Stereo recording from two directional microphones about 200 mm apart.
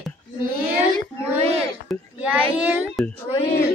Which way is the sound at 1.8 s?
5° right (ahead or behind).